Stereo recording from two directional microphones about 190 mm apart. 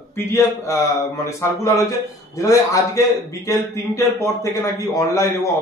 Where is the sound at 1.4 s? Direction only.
15° left (ahead or behind).